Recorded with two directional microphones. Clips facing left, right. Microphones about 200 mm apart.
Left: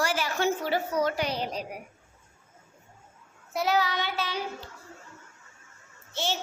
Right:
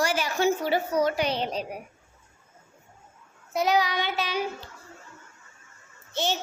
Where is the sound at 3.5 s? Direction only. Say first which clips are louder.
Right 2 dB; 15° right (ahead or behind).